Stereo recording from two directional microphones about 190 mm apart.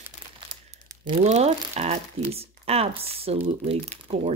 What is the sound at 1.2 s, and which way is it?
Speech, 35° right (ahead or behind).